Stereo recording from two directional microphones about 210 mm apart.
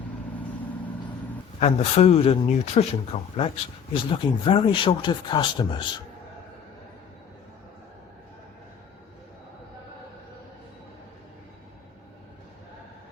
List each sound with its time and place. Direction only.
1.5 s speech: 30° left (ahead or behind)